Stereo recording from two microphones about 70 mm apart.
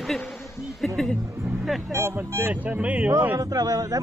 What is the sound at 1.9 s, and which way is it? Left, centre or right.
Speech, right.